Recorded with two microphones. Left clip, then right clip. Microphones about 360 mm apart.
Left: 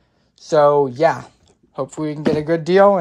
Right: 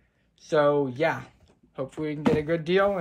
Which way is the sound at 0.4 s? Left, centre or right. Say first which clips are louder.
Left 9 dB; centre.